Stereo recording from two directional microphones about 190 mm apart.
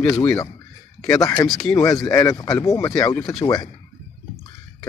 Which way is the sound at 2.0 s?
15° left (ahead or behind).